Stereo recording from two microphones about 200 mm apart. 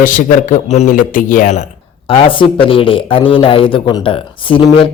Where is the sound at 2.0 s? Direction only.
25° left (ahead or behind).